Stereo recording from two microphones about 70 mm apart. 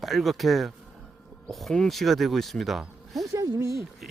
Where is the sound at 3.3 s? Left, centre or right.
Right.